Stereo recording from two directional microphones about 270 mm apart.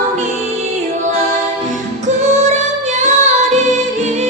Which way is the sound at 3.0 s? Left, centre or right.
Right.